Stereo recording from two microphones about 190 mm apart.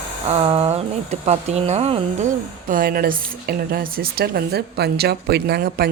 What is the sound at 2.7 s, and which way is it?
Speech, 50° right (ahead or behind).